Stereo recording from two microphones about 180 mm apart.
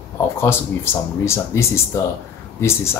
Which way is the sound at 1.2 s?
15° left (ahead or behind).